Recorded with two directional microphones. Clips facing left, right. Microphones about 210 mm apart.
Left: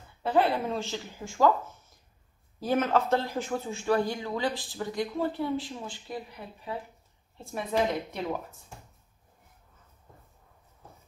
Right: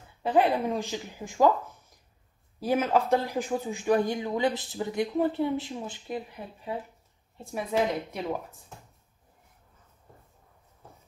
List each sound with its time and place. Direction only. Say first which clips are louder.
0.2 s speech: right 2 dB; 15° right (ahead or behind)
2.6 s speech: right 1 dB; 10° right (ahead or behind)
7.3 s speech: right 1 dB; 5° right (ahead or behind)